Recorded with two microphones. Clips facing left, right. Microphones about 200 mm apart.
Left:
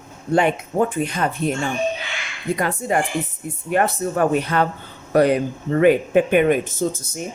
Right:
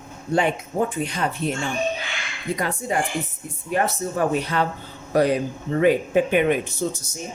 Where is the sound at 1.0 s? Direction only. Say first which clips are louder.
Left 3 dB; 55° left (ahead or behind).